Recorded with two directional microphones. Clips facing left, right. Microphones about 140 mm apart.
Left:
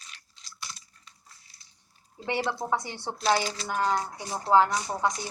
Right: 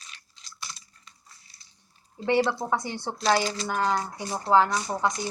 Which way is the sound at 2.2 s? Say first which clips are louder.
Right 5 dB; 10° left (ahead or behind).